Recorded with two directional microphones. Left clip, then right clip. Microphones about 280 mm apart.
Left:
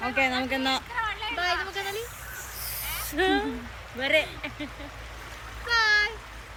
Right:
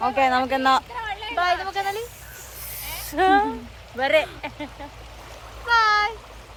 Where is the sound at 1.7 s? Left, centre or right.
Centre.